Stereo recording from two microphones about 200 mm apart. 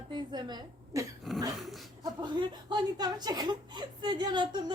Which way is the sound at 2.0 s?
20° right (ahead or behind).